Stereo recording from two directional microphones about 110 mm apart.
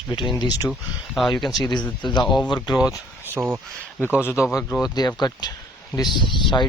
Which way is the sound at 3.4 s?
10° right (ahead or behind).